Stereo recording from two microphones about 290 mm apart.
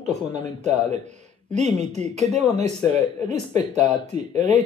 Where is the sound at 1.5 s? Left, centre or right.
Right.